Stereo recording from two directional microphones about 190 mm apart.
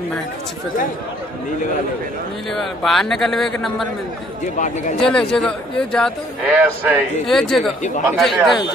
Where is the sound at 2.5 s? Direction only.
Centre (ahead or behind).